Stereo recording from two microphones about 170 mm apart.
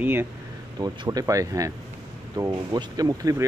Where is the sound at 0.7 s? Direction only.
25° right (ahead or behind).